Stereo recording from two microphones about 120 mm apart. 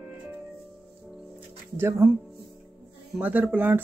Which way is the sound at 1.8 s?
20° right (ahead or behind).